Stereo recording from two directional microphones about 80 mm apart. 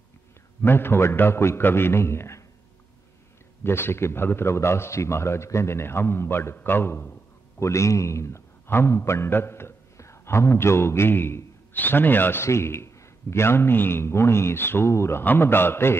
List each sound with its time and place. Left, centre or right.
0.6 s a man's voice: left
3.6 s a man's voice: left